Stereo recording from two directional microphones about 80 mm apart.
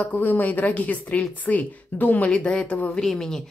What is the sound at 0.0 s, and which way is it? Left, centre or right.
Speech, left.